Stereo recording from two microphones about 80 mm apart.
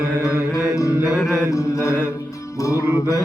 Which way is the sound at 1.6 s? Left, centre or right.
Left.